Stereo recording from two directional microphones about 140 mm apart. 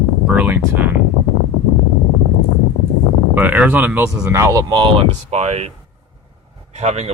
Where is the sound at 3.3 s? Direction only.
10° right (ahead or behind).